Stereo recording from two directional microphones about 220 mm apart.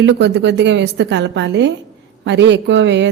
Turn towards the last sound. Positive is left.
turn(degrees=-55)  # may be behind; listen again after turning